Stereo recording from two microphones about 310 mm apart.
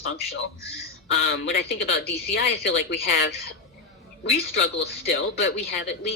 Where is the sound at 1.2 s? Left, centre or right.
Left.